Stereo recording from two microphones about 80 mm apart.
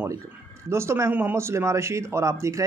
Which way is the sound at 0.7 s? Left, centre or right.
Right.